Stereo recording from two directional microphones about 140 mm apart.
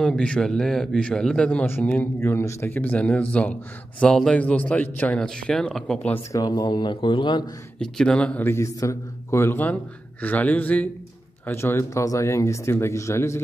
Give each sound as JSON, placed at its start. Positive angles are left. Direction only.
{"t": 0.0, "sound": "speech", "side_deg": 5}
{"t": 6.3, "sound": "speech", "side_deg": 30}
{"t": 7.8, "sound": "speech", "side_deg": 5}